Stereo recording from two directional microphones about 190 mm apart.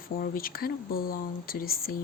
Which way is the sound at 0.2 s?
50° left (ahead or behind).